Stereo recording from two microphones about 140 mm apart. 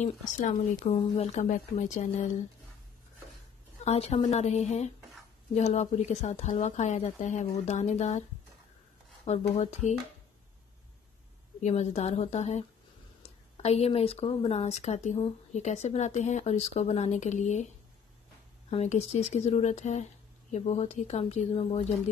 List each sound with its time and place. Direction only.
0.0 s a woman's voice: 65° left (ahead or behind)
3.8 s a woman's voice: 50° left (ahead or behind)
9.2 s speech: 50° left (ahead or behind)
11.6 s speech: 55° left (ahead or behind)
18.7 s a woman's voice: 50° left (ahead or behind)